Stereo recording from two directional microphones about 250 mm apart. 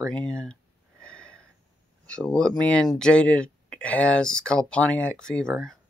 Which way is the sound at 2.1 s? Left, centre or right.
Centre.